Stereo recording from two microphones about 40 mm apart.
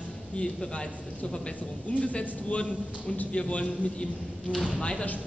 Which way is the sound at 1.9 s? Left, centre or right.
Left.